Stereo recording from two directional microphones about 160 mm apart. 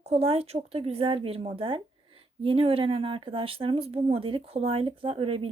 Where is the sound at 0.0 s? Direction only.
40° right (ahead or behind).